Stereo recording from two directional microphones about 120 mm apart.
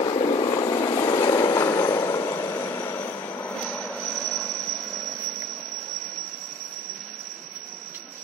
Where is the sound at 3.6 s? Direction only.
5° left (ahead or behind).